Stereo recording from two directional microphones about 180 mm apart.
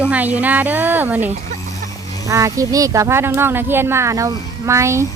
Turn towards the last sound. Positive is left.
turn(degrees=-15)  # may be behind; listen again after turning